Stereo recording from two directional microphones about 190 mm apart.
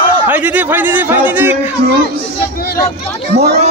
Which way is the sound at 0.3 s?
10° right (ahead or behind).